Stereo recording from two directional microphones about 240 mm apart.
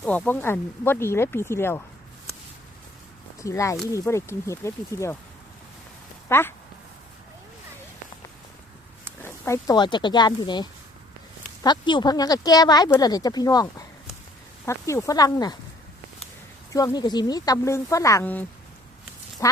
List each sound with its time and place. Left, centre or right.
0.0 s speech: centre
3.4 s speech: centre
6.2 s speech: centre
9.2 s speech: centre
16.7 s speech: centre